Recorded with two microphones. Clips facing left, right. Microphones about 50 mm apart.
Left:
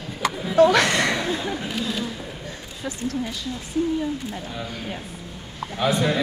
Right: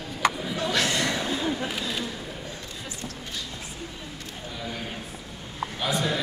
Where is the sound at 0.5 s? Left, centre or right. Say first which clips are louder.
Left 10 dB; left.